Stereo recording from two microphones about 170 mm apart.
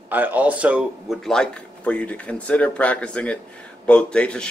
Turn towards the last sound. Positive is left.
turn(degrees=5)  # may be behind; listen again after turning